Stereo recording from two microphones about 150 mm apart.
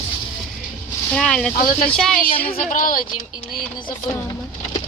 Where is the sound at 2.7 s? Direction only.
60° left (ahead or behind).